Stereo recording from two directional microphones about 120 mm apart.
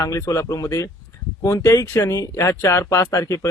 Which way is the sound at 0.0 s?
30° left (ahead or behind).